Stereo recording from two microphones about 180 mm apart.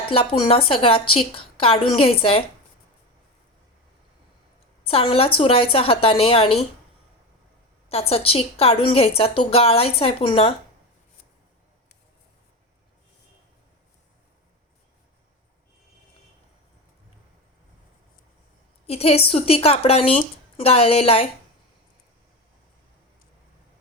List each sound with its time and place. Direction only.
0.1 s speech: 30° left (ahead or behind)
4.8 s speech: 30° left (ahead or behind)
7.9 s speech: 35° left (ahead or behind)
18.9 s speech: 35° left (ahead or behind)